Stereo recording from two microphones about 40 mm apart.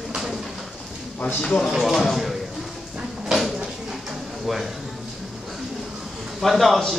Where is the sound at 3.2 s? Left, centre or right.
Centre.